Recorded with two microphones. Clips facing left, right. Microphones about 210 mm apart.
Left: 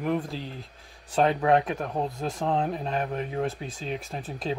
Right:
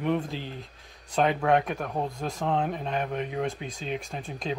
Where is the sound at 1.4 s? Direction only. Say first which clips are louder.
Left 1 dB; centre (ahead or behind).